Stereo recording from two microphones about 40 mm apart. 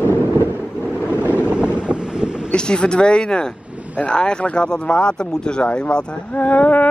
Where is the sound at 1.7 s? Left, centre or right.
Right.